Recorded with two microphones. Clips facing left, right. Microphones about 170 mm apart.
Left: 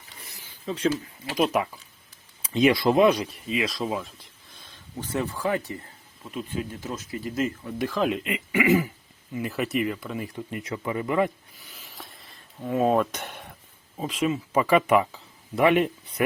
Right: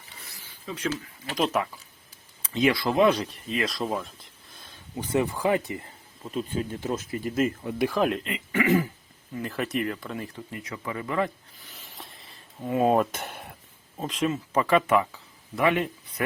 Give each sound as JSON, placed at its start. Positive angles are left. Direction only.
{"t": 0.3, "sound": "a sound", "side_deg": 25}
{"t": 0.9, "sound": "speech", "side_deg": 10}
{"t": 3.5, "sound": "speech", "side_deg": 0}
{"t": 4.9, "sound": "speech", "side_deg": -15}
{"t": 6.3, "sound": "speech", "side_deg": -30}
{"t": 7.8, "sound": "speech", "side_deg": -10}
{"t": 8.2, "sound": "speech", "side_deg": 10}
{"t": 11.7, "sound": "a sound", "side_deg": 0}
{"t": 12.6, "sound": "speech", "side_deg": -5}